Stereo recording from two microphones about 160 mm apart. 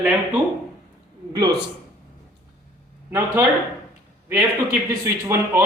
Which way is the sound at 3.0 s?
15° right (ahead or behind).